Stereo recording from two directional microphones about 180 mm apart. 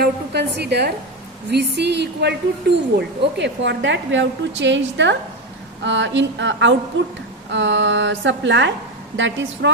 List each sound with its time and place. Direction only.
0.0 s a woman's voice: 65° right (ahead or behind); by 9.7 s 90° right